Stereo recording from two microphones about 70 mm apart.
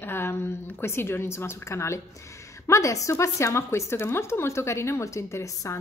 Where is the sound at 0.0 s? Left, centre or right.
Left.